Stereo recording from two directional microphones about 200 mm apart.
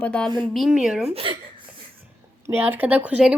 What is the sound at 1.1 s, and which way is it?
Speech, 25° right (ahead or behind).